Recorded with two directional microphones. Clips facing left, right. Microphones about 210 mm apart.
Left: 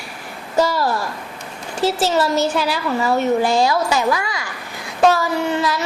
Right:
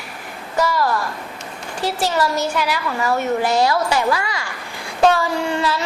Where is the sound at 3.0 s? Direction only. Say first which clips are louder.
Left 2 dB; 20° left (ahead or behind).